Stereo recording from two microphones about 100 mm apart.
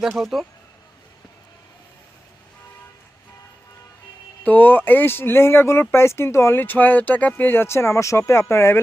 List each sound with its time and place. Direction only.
0.0 s speech: centre (ahead or behind)
4.4 s speech: 20° left (ahead or behind)